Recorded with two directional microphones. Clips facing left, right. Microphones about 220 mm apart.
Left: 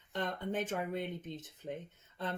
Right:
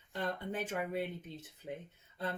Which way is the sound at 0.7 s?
10° right (ahead or behind).